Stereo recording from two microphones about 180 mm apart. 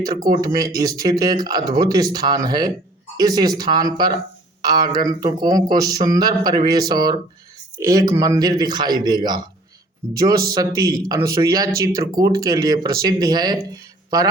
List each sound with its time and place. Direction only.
0.4 s speech: 20° right (ahead or behind)